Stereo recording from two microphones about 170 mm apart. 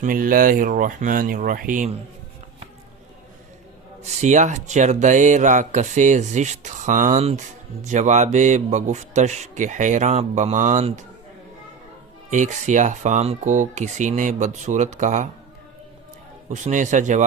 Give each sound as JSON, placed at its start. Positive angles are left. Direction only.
{"t": 0.0, "sound": "speech", "side_deg": -55}
{"t": 4.0, "sound": "speech", "side_deg": -45}
{"t": 12.3, "sound": "speech", "side_deg": -45}
{"t": 16.5, "sound": "speech", "side_deg": -45}